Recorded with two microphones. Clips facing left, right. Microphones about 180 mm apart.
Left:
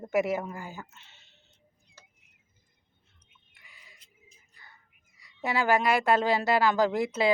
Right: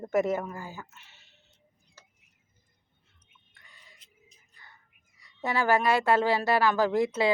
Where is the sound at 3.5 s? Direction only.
10° left (ahead or behind).